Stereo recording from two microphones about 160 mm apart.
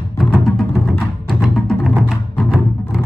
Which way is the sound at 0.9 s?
Centre (ahead or behind).